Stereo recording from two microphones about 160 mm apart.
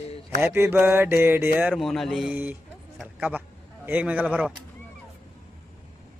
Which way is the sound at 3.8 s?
10° right (ahead or behind).